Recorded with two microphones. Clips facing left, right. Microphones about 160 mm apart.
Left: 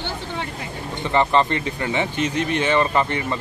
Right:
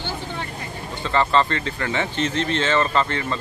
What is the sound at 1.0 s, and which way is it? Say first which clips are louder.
Speech: left 1 dB; 15° left (ahead or behind).